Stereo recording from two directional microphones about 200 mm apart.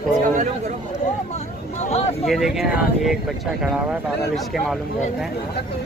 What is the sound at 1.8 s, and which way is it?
Speech, 35° left (ahead or behind).